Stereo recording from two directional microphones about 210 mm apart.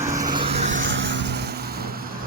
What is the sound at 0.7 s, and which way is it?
Vehicle, 60° right (ahead or behind).